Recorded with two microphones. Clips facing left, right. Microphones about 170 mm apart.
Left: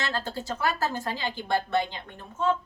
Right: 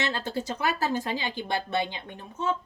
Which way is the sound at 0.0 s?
15° right (ahead or behind).